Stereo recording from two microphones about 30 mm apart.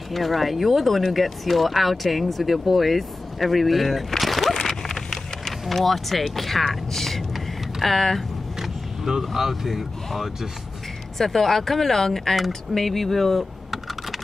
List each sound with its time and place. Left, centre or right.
0.1 s speech: centre
4.2 s a sound: centre
8.5 s vehicle: centre
9.2 s speech: centre
11.1 s speech: centre